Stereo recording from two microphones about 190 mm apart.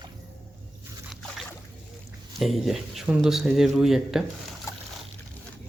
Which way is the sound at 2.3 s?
Centre (ahead or behind).